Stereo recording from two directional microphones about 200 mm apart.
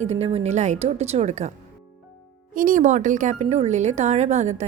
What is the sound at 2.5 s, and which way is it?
A woman's voice, 45° right (ahead or behind).